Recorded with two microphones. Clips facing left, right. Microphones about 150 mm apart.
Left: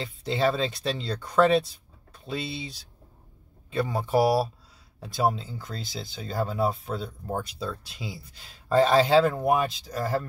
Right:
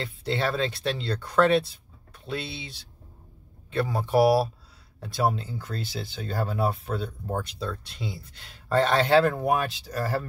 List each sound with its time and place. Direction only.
0.0 s speech: centre (ahead or behind)